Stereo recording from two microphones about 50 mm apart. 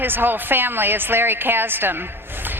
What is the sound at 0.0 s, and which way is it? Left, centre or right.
A woman's voice, right.